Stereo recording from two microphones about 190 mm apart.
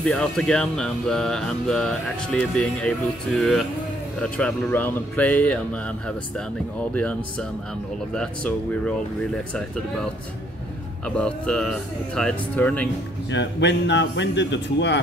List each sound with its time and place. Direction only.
0.0 s speech: 5° left (ahead or behind)
11.1 s speech: 5° left (ahead or behind)
13.3 s a man's voice: 65° left (ahead or behind)